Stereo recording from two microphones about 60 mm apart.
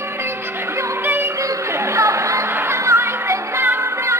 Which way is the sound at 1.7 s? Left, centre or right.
Right.